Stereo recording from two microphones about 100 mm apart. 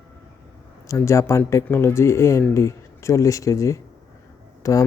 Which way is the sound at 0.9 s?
30° left (ahead or behind).